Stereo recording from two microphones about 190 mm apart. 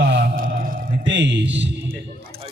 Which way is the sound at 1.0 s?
75° right (ahead or behind).